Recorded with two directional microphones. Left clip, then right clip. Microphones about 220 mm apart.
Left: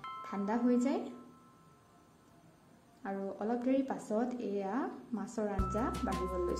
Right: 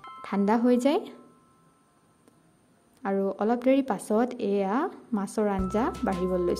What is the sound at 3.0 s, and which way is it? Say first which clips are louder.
Speech: right 11 dB; 45° right (ahead or behind).